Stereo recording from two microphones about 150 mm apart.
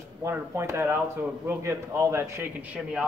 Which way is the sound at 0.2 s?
20° right (ahead or behind).